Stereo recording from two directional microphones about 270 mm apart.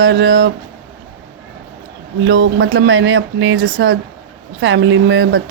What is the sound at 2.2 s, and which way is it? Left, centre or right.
Speech, right.